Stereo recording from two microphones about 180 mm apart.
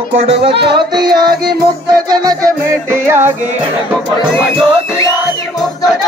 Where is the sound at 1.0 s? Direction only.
25° right (ahead or behind).